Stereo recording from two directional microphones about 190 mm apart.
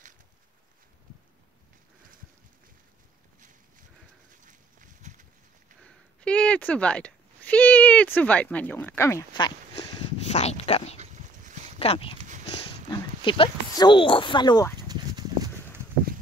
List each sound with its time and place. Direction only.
4.5 s a sound: 40° right (ahead or behind)
5.9 s a sound: 5° left (ahead or behind); by 10.0 s 20° left (ahead or behind)
10.3 s speech: 35° left (ahead or behind)
11.0 s dog: 40° right (ahead or behind)
11.8 s speech: 30° left (ahead or behind)
14.9 s horse: 20° right (ahead or behind)